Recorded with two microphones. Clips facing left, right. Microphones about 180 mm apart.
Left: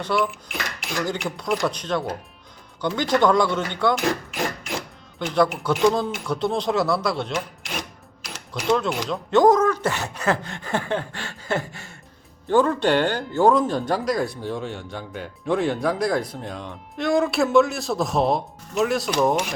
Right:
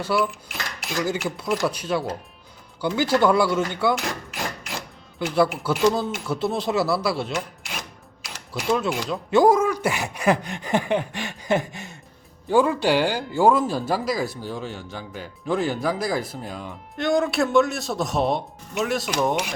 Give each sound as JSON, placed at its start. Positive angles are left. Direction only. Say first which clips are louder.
{"t": 0.0, "sound": "speech", "louder": "even", "side_deg": -5}
{"t": 5.2, "sound": "speech", "louder": "even", "side_deg": -5}
{"t": 8.5, "sound": "speech", "louder": "left 1 dB", "side_deg": -5}